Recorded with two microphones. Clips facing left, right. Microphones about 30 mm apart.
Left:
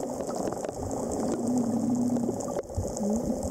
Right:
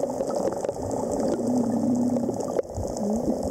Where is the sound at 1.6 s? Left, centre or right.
Centre.